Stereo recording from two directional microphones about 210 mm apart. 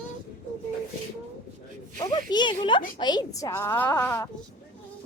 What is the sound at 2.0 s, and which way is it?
Speech, 20° left (ahead or behind).